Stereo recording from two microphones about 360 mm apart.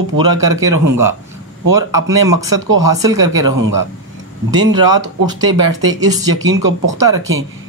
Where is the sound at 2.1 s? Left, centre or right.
Right.